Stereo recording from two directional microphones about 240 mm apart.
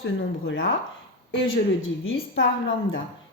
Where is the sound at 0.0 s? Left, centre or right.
Left.